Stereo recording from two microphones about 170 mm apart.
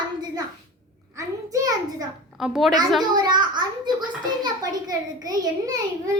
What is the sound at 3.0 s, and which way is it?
Speech, 25° right (ahead or behind).